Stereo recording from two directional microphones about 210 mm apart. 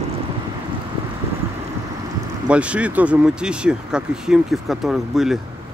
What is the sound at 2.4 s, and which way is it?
Speech, 5° right (ahead or behind).